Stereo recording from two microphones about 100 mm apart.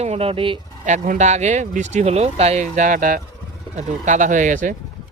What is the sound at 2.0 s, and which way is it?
Speech, 90° right.